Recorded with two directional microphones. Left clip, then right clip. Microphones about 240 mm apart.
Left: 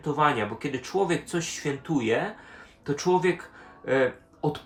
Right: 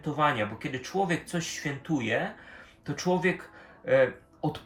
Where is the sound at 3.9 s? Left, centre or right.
Centre.